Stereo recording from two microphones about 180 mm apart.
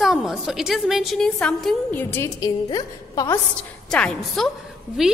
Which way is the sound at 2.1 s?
20° left (ahead or behind).